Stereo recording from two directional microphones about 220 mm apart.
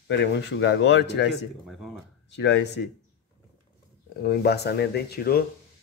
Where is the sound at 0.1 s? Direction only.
50° left (ahead or behind).